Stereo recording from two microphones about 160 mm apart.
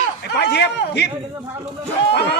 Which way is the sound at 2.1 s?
90° left.